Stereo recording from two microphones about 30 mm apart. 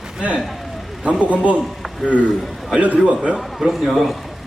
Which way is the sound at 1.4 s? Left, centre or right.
Right.